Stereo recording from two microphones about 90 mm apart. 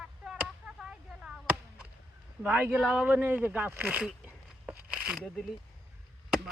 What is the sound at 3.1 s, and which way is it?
Speech, 20° right (ahead or behind).